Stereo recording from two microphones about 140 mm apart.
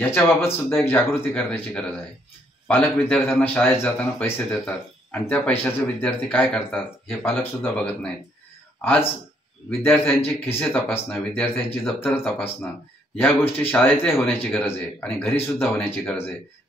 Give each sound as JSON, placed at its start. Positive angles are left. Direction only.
{"t": 0.0, "sound": "speech", "side_deg": 15}
{"t": 13.6, "sound": "speech", "side_deg": 15}
{"t": 14.0, "sound": "speech", "side_deg": 0}
{"t": 14.4, "sound": "speech", "side_deg": 10}